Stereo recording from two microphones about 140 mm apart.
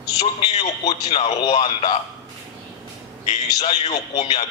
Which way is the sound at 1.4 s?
35° left (ahead or behind).